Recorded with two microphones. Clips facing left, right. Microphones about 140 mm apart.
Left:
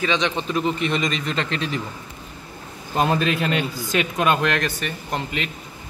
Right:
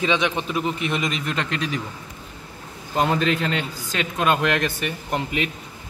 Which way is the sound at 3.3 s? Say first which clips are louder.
Left 1 dB; 15° left (ahead or behind).